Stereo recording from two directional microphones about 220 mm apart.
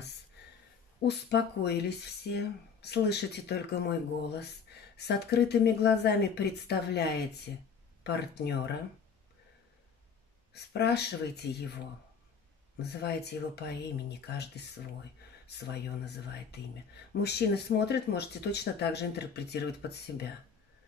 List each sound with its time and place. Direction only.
1.0 s speech: 50° left (ahead or behind)
10.5 s speech: 50° left (ahead or behind)
12.8 s speech: 50° left (ahead or behind)